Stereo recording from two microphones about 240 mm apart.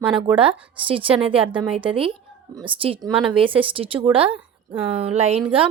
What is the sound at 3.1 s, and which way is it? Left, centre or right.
A woman's voice, right.